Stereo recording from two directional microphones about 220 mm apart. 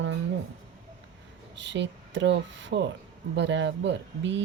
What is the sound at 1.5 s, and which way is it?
Speech, 55° right (ahead or behind).